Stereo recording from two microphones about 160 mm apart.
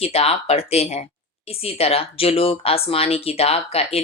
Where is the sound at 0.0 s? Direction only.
40° left (ahead or behind).